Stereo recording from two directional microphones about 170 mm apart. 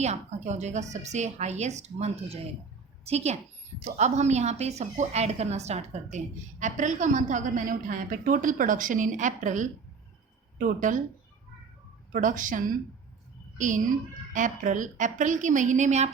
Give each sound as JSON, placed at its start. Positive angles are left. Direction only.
{"t": 0.0, "sound": "a woman's voice", "side_deg": -40}
{"t": 12.1, "sound": "a woman's voice", "side_deg": -50}